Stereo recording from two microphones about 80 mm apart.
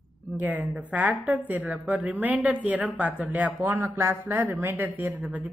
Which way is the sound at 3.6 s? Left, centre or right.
Right.